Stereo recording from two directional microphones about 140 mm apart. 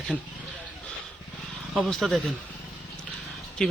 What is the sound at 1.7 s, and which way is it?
Speech, centre (ahead or behind).